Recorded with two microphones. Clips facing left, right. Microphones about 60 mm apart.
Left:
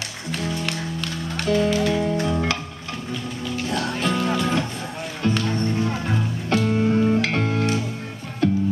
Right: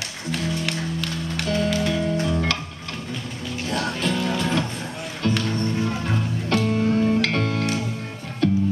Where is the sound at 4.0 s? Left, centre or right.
Left.